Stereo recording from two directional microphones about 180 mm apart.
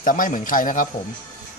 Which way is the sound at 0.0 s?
50° left (ahead or behind).